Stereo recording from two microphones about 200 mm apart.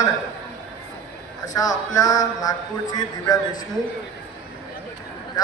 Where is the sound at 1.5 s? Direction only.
20° left (ahead or behind).